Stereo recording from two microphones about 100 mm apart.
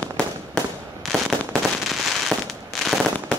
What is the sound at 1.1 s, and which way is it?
Fireworks, centre (ahead or behind).